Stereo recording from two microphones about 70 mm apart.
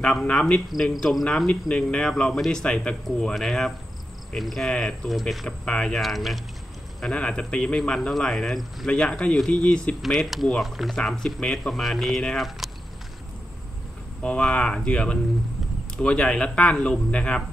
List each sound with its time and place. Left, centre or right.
0.0 s speech: centre
4.6 s speech: centre
5.9 s speech: centre
7.0 s speech: centre
10.0 s speech: centre
14.2 s speech: centre